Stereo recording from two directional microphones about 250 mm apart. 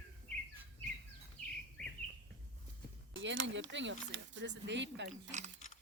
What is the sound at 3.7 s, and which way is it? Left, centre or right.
Speech, right.